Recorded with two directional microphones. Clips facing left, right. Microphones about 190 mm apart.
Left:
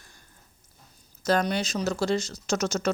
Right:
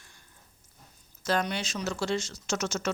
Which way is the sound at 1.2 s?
40° left (ahead or behind).